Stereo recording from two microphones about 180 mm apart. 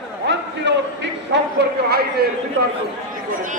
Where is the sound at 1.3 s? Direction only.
65° right (ahead or behind).